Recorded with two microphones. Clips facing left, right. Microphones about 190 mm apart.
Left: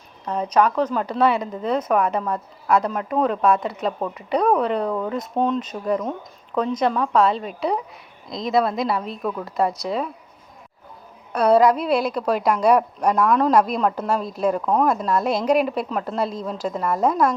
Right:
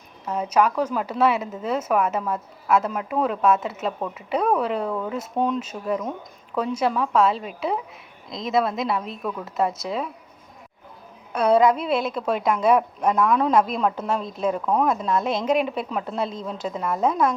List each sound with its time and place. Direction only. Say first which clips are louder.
0.3 s speech: left 2 dB; 5° right (ahead or behind)
11.3 s speech: left 2 dB; centre (ahead or behind)